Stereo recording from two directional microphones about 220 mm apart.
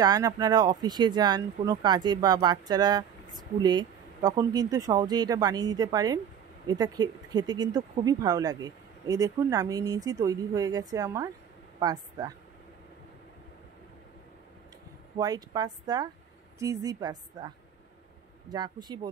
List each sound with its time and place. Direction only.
0.0 s speech: 20° right (ahead or behind)
15.1 s speech: 15° right (ahead or behind)
18.5 s speech: 20° right (ahead or behind)